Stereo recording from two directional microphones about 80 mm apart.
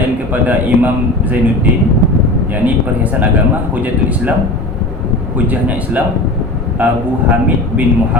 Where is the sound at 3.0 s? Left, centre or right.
Right.